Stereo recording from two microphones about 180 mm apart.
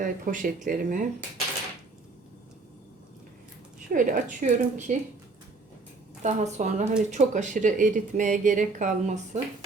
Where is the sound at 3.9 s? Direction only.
45° right (ahead or behind).